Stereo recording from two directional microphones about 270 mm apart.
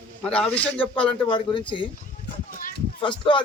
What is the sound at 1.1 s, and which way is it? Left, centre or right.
Speech, centre.